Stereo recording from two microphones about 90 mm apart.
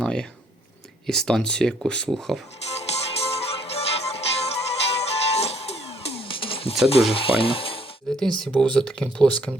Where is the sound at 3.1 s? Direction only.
90° left.